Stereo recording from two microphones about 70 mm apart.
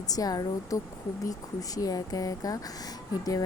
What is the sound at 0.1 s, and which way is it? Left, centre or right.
Speech, left.